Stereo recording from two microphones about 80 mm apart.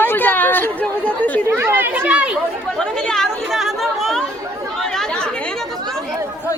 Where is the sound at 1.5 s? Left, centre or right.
Right.